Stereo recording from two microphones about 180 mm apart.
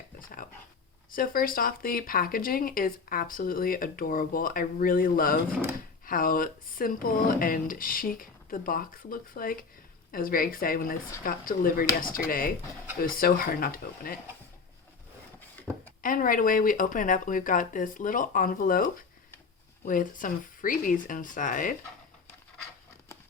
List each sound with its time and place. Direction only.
1.1 s speech: 55° left (ahead or behind)
15.5 s a sound: 10° left (ahead or behind)
16.0 s speech: 50° left (ahead or behind)